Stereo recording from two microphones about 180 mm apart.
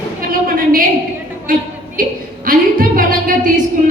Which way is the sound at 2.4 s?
50° right (ahead or behind).